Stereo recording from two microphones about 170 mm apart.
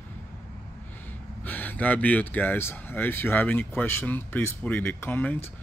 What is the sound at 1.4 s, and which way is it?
Speech, 10° left (ahead or behind).